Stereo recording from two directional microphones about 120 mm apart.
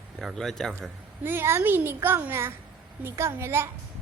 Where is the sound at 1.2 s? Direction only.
20° right (ahead or behind).